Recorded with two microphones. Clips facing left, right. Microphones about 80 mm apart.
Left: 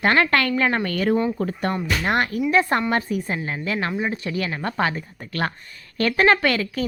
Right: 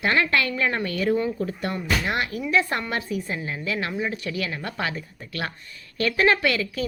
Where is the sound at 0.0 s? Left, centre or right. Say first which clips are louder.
Left 3 dB; left.